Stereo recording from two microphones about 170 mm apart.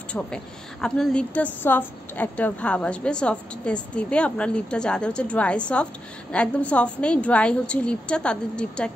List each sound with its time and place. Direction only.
0.1 s a woman's voice: 5° left (ahead or behind)